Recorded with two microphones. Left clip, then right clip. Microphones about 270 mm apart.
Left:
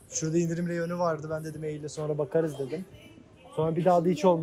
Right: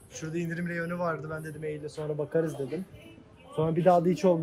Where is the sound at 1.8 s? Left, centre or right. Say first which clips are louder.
Left 5 dB; left.